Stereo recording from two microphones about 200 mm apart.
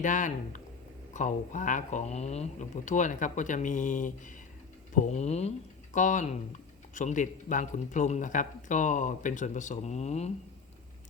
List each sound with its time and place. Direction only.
0.0 s speech: 40° left (ahead or behind)